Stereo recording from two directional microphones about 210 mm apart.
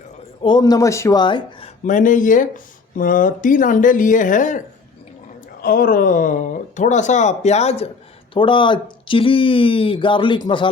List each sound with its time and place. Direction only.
0.4 s speech: 20° left (ahead or behind)
1.8 s speech: 40° left (ahead or behind)
5.6 s speech: 45° left (ahead or behind); by 10.7 s 20° left (ahead or behind)